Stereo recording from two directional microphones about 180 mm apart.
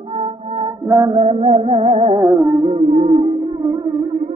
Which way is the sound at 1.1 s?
35° right (ahead or behind).